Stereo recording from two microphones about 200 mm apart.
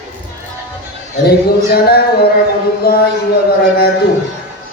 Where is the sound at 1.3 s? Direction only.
50° left (ahead or behind).